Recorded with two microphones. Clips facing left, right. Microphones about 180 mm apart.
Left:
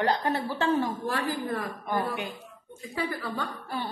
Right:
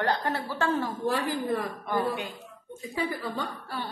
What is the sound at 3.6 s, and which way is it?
Music, 15° left (ahead or behind).